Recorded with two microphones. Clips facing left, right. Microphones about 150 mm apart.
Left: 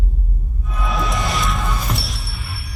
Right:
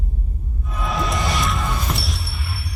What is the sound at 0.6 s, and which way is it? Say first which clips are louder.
Music: left 1 dB; centre (ahead or behind).